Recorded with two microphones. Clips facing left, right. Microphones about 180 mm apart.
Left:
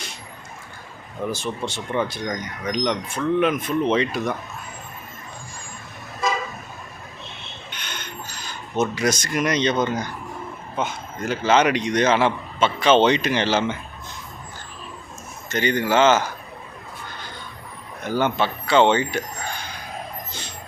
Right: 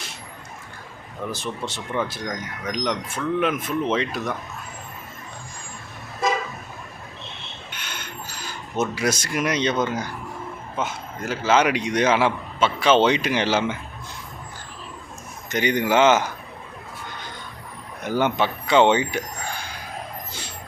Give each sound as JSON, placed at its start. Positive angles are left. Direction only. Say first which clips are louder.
{"t": 1.3, "sound": "speech", "louder": "left 2 dB", "side_deg": 0}
{"t": 7.7, "sound": "a sound", "louder": "left 1 dB", "side_deg": -5}
{"t": 10.8, "sound": "a man's voice", "louder": "left 2 dB", "side_deg": -5}
{"t": 15.4, "sound": "a man's voice", "louder": "even", "side_deg": -15}
{"t": 18.0, "sound": "speech", "louder": "even", "side_deg": -15}